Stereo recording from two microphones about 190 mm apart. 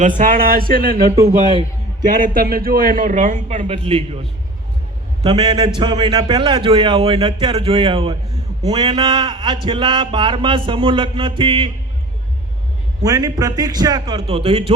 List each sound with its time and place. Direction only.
0.2 s a man's voice: 45° right (ahead or behind)
2.0 s a man's voice: 50° right (ahead or behind); by 11.7 s 25° right (ahead or behind)
13.0 s speech: 20° right (ahead or behind)